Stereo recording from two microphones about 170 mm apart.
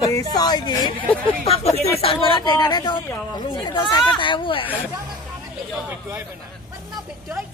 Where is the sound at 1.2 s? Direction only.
35° left (ahead or behind).